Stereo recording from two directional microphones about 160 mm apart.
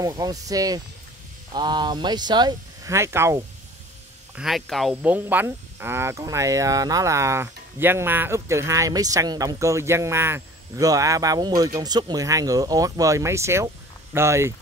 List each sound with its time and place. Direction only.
0.0 s speech: 20° right (ahead or behind)
4.4 s speech: centre (ahead or behind)
5.0 s speech: 10° right (ahead or behind)